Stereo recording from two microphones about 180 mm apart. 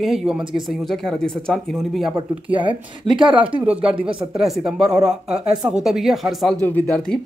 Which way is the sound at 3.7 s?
5° right (ahead or behind).